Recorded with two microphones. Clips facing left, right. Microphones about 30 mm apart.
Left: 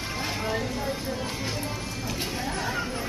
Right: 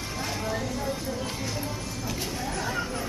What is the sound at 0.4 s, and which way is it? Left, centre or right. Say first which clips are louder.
Vehicle: left 1 dB; left.